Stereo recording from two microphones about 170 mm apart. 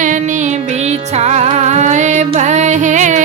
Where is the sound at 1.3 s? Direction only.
40° right (ahead or behind).